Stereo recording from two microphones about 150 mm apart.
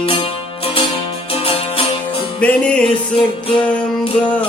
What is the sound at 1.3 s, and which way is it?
Music, 40° left (ahead or behind).